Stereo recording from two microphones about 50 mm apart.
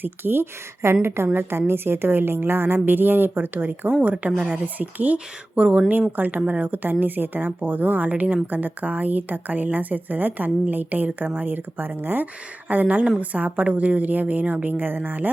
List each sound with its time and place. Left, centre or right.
0.0 s a woman's voice: right
5.9 s speech: right